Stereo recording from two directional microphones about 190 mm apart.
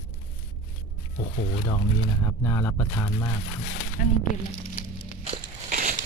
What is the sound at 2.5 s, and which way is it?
Speech, 15° left (ahead or behind).